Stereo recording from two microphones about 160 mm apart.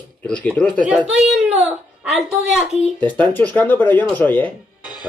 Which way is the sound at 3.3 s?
10° left (ahead or behind).